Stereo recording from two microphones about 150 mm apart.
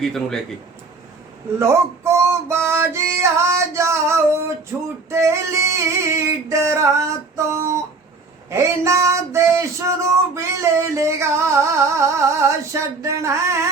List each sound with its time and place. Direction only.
0.0 s speech: 5° left (ahead or behind)
1.5 s music: 20° right (ahead or behind)
5.0 s a sound: 20° right (ahead or behind)